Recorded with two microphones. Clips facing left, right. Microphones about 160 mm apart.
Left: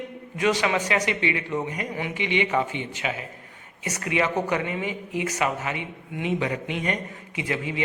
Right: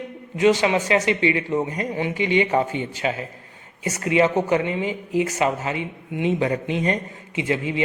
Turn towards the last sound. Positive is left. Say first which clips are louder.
# right 5 dB
turn(degrees=-25)  # may be behind; listen again after turning